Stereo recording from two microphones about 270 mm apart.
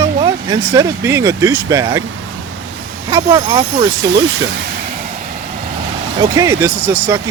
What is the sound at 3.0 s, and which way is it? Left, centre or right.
Speech, centre.